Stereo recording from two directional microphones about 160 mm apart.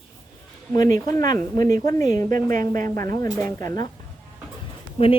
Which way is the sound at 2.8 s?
20° left (ahead or behind).